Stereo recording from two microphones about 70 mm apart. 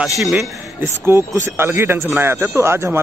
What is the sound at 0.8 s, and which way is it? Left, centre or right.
Speech, right.